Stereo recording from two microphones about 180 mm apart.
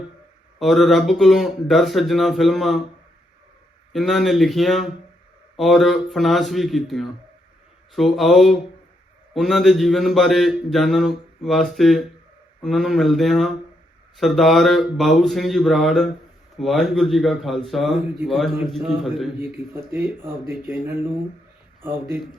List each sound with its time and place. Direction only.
0.6 s speech: centre (ahead or behind)
3.9 s speech: centre (ahead or behind)
19.9 s speech: 10° right (ahead or behind)